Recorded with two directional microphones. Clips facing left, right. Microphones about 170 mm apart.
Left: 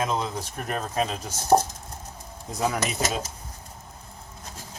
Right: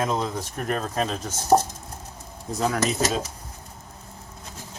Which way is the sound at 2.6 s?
10° left (ahead or behind).